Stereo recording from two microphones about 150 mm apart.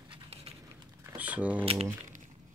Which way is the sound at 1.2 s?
10° right (ahead or behind).